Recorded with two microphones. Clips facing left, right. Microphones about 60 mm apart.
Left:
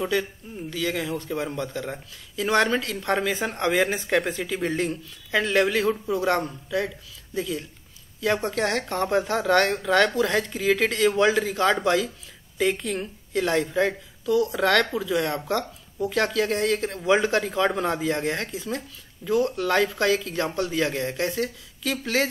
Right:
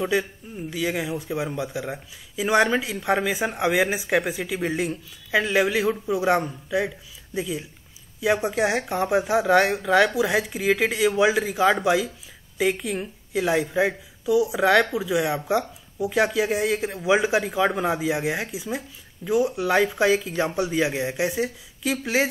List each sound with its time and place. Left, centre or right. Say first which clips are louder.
0.0 s speech: right 2 dB; centre